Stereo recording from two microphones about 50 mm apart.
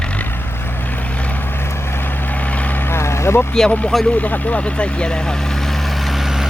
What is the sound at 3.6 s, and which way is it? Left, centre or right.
Speech, centre.